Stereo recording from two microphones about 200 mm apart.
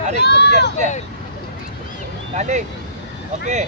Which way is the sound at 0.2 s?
55° left (ahead or behind).